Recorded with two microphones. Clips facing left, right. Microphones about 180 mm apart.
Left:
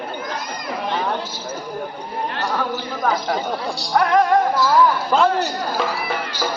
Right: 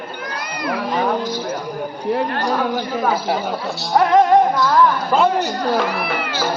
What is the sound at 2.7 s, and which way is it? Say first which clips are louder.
Speech: right 3 dB; 10° right (ahead or behind).